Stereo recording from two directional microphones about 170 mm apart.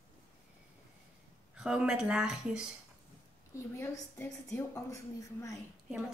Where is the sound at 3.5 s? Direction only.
15° left (ahead or behind).